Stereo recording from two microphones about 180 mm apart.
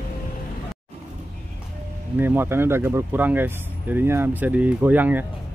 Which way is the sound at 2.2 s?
10° right (ahead or behind).